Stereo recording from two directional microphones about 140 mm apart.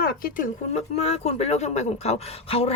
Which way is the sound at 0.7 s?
50° left (ahead or behind).